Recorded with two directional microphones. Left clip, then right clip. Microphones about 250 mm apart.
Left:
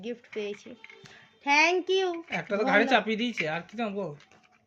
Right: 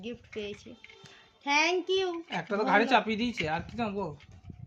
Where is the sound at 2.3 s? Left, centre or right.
Right.